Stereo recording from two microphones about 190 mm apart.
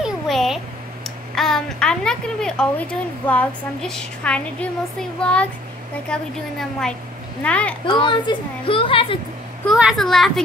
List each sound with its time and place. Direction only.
0.0 s a sound: centre (ahead or behind)
1.3 s a woman's voice: centre (ahead or behind)
7.4 s a child's voice: 5° left (ahead or behind)
7.8 s a woman's voice: 25° left (ahead or behind)
9.7 s a woman's voice: centre (ahead or behind)